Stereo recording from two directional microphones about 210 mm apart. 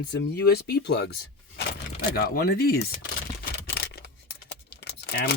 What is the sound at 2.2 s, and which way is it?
Speech, 45° left (ahead or behind).